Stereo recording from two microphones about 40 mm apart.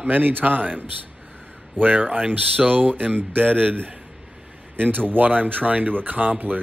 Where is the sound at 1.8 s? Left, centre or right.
Right.